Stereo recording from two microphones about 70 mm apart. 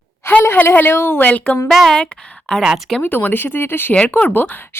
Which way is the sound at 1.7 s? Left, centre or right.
Centre.